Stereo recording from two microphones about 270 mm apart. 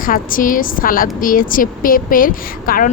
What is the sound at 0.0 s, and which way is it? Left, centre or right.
A woman's voice, left.